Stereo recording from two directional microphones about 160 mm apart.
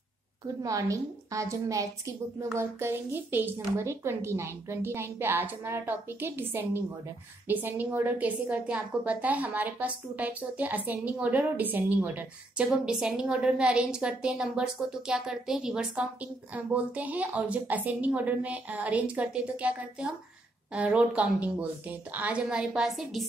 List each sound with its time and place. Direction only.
0.6 s a woman's voice: 20° right (ahead or behind); by 23.2 s centre (ahead or behind)